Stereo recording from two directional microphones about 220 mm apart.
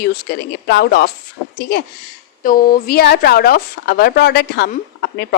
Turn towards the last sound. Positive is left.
turn(degrees=45)  # may be behind; listen again after turning